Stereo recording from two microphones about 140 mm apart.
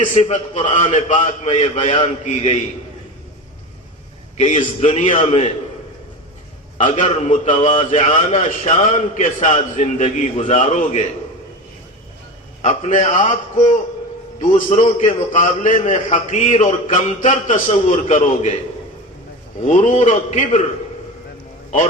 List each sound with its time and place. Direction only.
0.0 s a man's voice: 60° left (ahead or behind)
4.8 s a man's voice: 60° left (ahead or behind)
5.2 s a man's voice: 45° left (ahead or behind)
6.7 s a man's voice: 60° left (ahead or behind)
12.6 s a man's voice: 60° left (ahead or behind)
19.6 s a man's voice: 60° left (ahead or behind)